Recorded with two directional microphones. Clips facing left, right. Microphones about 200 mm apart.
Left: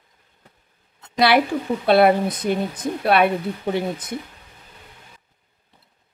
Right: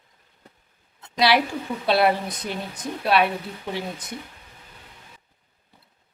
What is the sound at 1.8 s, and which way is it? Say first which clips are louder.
Speech: left 5 dB; 55° left (ahead or behind).